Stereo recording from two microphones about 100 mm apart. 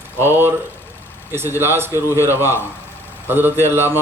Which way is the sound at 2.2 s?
25° left (ahead or behind).